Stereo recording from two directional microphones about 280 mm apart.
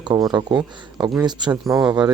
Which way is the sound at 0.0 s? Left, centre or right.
Centre.